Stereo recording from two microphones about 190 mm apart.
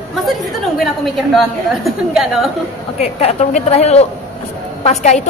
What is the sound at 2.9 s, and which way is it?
A woman's voice, 35° left (ahead or behind).